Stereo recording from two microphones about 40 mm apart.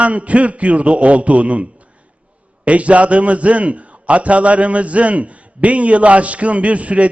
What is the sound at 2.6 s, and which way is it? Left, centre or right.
A man's voice, right.